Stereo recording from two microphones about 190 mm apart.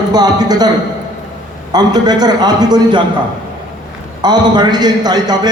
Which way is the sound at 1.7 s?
20° right (ahead or behind).